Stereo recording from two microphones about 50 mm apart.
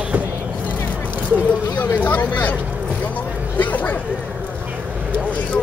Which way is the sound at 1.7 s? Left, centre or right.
Left.